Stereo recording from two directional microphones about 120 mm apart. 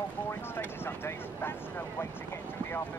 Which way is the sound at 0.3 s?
20° left (ahead or behind).